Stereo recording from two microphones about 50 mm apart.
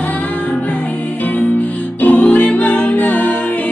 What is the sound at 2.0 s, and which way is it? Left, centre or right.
Music, left.